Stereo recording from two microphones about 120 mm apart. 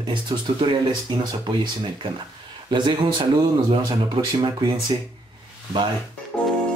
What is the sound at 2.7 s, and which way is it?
Speech, 40° right (ahead or behind).